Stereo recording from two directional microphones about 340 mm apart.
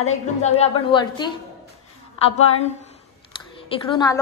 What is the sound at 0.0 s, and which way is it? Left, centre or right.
A woman's voice, centre.